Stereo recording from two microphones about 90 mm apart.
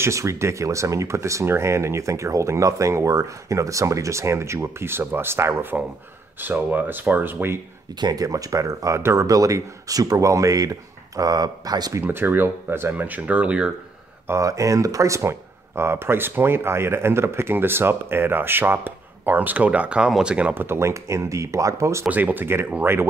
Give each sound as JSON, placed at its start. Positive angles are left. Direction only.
{"t": 0.0, "sound": "speech", "side_deg": -35}
{"t": 8.0, "sound": "speech", "side_deg": -45}
{"t": 12.0, "sound": "speech", "side_deg": -25}
{"t": 14.2, "sound": "speech", "side_deg": -35}
{"t": 20.6, "sound": "speech", "side_deg": -30}
{"t": 22.0, "sound": "speech", "side_deg": -20}